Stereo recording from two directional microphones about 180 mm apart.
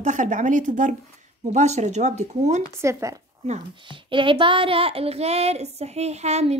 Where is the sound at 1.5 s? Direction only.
40° right (ahead or behind).